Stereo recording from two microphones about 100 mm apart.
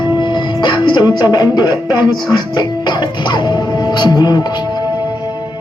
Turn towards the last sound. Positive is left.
turn(degrees=45)  # may be behind; listen again after turning